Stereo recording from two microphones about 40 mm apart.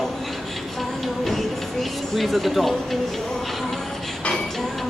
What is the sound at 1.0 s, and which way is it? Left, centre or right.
Music, centre.